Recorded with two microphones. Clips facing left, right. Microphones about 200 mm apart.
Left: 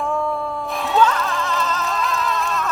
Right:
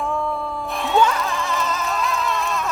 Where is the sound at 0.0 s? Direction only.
Centre (ahead or behind).